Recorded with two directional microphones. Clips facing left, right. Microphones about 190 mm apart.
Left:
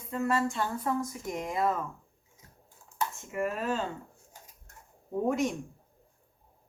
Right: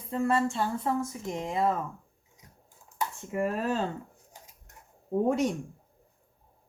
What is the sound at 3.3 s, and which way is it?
Speech, 35° right (ahead or behind).